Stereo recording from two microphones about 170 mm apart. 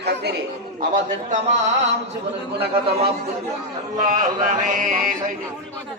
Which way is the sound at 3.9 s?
50° right (ahead or behind).